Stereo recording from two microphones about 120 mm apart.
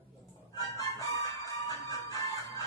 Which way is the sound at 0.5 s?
30° left (ahead or behind).